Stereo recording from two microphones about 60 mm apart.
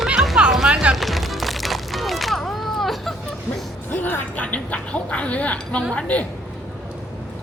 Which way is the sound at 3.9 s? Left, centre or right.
Left.